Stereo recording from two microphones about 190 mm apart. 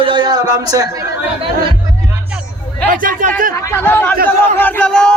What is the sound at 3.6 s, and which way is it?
Speech, 10° left (ahead or behind).